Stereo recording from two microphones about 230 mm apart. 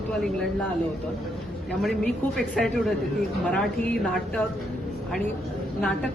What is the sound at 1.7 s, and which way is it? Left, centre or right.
A man's voice, centre.